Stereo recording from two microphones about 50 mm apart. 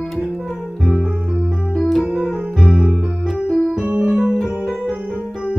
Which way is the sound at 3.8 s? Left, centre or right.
Right.